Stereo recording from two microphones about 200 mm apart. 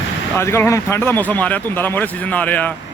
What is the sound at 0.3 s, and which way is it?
Speech, 10° left (ahead or behind).